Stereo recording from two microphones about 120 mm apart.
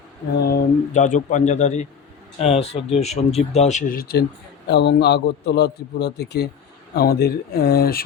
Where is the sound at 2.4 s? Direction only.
60° left (ahead or behind); by 3.9 s 75° left (ahead or behind).